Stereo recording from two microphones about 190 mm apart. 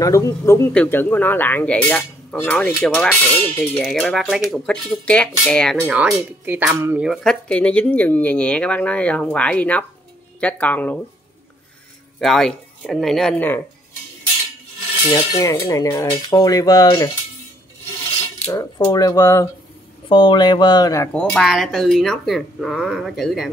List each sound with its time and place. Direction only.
0.0 s speech: 15° left (ahead or behind)
5.8 s speech: 5° right (ahead or behind)
12.2 s speech: centre (ahead or behind)
15.0 s cutlery: 20° left (ahead or behind)
18.5 s speech: 15° left (ahead or behind)
20.1 s cutlery: 25° left (ahead or behind)
21.1 s speech: 5° left (ahead or behind)